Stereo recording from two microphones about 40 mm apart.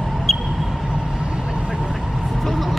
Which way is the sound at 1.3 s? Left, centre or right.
Right.